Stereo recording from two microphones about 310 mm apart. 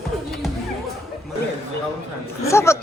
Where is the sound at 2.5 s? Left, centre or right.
Centre.